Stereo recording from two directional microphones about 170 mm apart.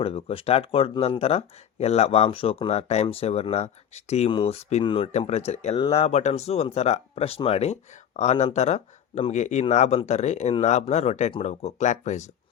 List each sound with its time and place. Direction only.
0.0 s speech: 35° left (ahead or behind)